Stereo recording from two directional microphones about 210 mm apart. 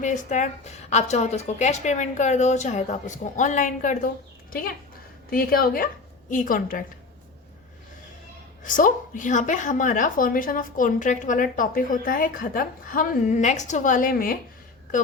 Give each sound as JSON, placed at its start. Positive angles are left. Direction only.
{"t": 0.0, "sound": "a woman's voice", "side_deg": 35}
{"t": 5.3, "sound": "a woman's voice", "side_deg": 45}
{"t": 8.6, "sound": "a woman's voice", "side_deg": 40}